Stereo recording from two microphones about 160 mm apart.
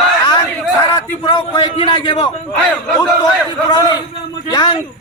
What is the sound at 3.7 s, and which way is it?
A man's voice, 25° left (ahead or behind).